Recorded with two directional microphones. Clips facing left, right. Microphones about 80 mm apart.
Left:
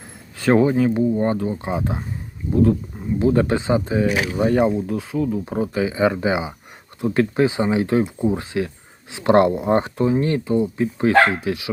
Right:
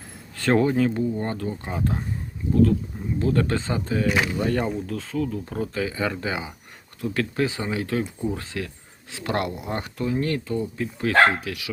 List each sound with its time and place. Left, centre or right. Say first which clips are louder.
0.3 s speech: left 4 dB; centre
3.2 s speech: left 5 dB; centre